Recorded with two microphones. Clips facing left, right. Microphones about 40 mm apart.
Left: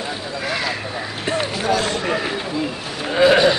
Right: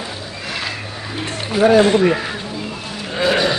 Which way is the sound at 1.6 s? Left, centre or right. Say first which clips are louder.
Right 14 dB; right.